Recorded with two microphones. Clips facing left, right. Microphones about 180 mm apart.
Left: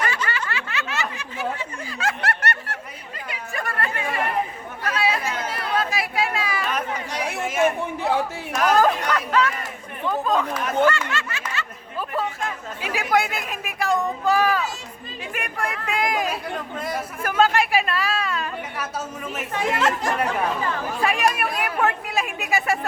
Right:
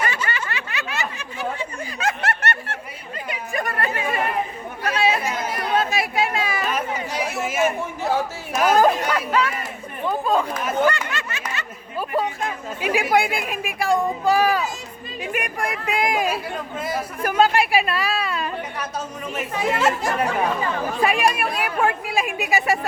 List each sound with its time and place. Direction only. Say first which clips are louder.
0.3 s snicker: even; 20° right (ahead or behind)
3.2 s chatter: right 4 dB; 15° right (ahead or behind)
6.7 s chatter: right 2 dB; 5° right (ahead or behind)
8.5 s a sound: right 2 dB; 10° right (ahead or behind)
10.1 s chatter: right 1 dB; 10° right (ahead or behind)
10.8 s a sound: even; 15° right (ahead or behind)
18.8 s speech: right 1 dB; 5° left (ahead or behind); by 22.8 s 15° right (ahead or behind)